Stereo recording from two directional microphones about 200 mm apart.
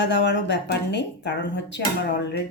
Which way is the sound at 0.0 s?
60° left (ahead or behind).